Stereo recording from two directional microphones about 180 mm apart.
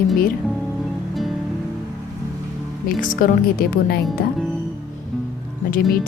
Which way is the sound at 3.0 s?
50° left (ahead or behind).